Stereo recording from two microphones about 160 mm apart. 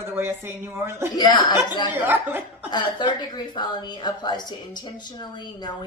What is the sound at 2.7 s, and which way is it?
A woman's voice, 30° left (ahead or behind).